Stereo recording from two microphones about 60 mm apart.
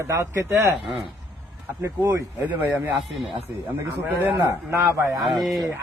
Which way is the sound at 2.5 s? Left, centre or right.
Right.